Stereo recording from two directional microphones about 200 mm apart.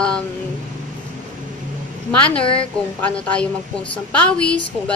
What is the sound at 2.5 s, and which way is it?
Speech, 5° left (ahead or behind).